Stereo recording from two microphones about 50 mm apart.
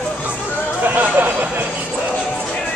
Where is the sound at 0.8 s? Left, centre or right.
Right.